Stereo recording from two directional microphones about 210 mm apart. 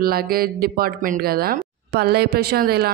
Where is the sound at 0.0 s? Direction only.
45° right (ahead or behind).